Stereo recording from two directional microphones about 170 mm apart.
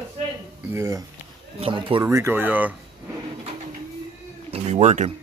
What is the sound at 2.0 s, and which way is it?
Speech, 15° right (ahead or behind).